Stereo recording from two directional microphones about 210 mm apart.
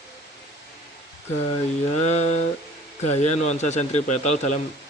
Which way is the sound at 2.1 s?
30° left (ahead or behind).